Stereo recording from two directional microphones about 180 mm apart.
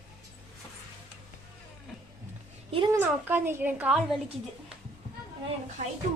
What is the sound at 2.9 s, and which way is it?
Speech, 10° right (ahead or behind).